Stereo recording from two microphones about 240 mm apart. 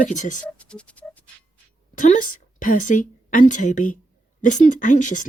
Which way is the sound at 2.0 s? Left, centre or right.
Left.